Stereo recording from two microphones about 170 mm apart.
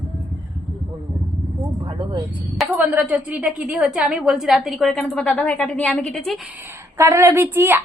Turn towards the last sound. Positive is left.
turn(degrees=-15)  # may be behind; listen again after turning